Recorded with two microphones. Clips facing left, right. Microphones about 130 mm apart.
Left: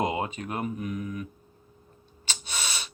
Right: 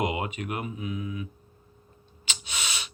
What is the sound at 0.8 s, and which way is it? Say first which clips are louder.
Mantra: left 1 dB; 55° left (ahead or behind).